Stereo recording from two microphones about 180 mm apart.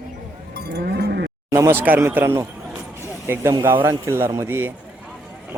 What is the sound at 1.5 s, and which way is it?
Speech, 15° right (ahead or behind).